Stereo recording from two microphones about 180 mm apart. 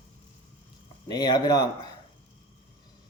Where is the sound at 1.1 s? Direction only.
25° left (ahead or behind).